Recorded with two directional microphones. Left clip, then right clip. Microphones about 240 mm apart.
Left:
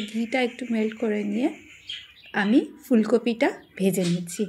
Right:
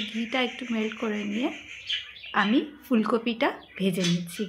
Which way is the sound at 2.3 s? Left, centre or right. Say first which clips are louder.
Left 2 dB; centre.